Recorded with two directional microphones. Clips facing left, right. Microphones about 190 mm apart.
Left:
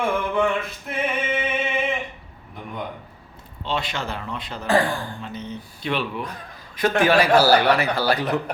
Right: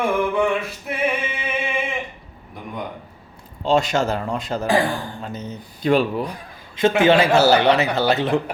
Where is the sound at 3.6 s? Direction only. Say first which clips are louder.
Right 9 dB; 45° right (ahead or behind).